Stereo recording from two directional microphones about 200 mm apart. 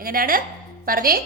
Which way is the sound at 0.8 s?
45° right (ahead or behind).